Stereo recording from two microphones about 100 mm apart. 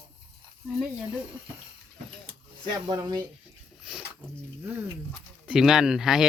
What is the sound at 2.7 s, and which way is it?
Speech, 40° right (ahead or behind).